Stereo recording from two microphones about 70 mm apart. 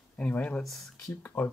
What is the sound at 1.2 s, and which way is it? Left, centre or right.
Speech, left.